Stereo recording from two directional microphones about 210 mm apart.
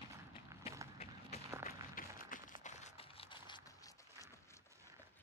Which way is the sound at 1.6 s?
40° left (ahead or behind).